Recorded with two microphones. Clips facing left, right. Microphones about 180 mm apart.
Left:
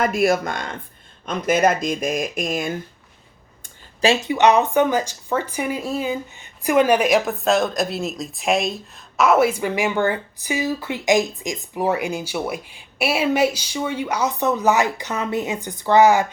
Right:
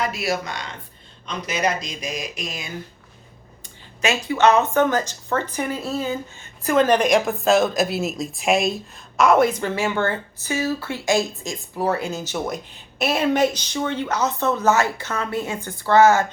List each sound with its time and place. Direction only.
0.0 s speech: 50° left (ahead or behind)
4.0 s speech: 25° left (ahead or behind)